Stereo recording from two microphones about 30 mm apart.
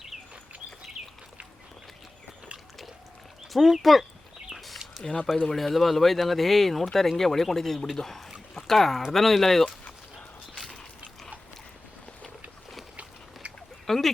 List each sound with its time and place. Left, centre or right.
1.0 s bird: centre
3.5 s speech: centre
4.5 s a sound: centre
5.5 s speech: centre
13.8 s speech: centre